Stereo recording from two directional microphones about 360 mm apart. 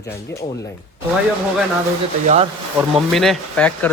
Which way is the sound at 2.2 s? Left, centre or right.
Centre.